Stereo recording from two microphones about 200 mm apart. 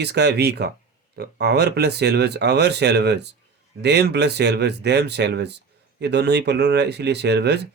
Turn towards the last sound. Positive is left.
turn(degrees=-55)  # may be behind; listen again after turning